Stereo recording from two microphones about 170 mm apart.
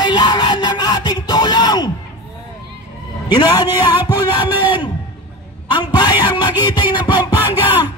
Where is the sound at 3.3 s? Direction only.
25° left (ahead or behind).